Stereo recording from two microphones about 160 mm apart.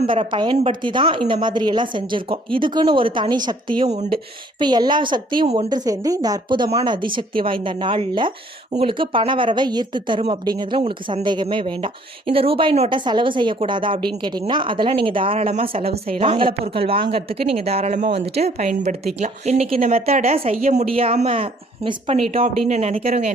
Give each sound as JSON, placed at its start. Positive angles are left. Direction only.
{"t": 0.1, "sound": "a woman's voice", "side_deg": -30}
{"t": 3.8, "sound": "speech", "side_deg": -45}
{"t": 4.6, "sound": "a woman's voice", "side_deg": -25}